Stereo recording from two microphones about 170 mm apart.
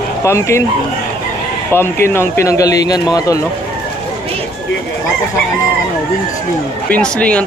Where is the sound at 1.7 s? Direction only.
15° left (ahead or behind).